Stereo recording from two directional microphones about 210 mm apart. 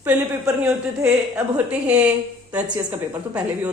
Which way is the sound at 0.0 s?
10° right (ahead or behind).